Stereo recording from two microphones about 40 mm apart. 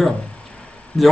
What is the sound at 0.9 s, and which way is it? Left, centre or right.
Speech, left.